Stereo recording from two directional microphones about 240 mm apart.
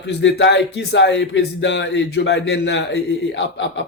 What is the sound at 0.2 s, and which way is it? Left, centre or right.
Speech, left.